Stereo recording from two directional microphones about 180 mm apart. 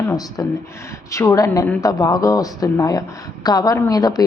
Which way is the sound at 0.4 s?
15° left (ahead or behind).